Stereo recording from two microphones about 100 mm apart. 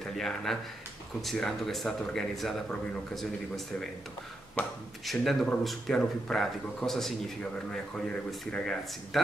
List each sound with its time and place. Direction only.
0.0 s a man's voice: 5° left (ahead or behind)
4.6 s speech: 20° left (ahead or behind)
5.0 s a man's voice: centre (ahead or behind)